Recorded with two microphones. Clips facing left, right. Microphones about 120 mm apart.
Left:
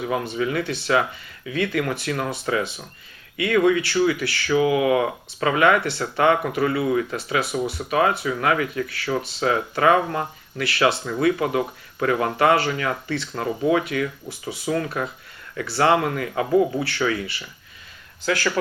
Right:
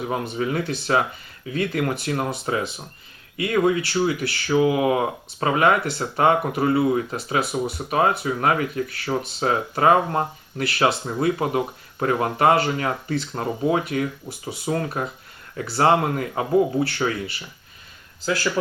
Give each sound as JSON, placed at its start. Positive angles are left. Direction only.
{"t": 0.1, "sound": "speech", "side_deg": -35}